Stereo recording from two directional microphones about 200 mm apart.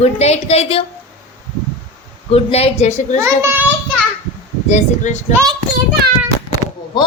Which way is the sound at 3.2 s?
10° right (ahead or behind).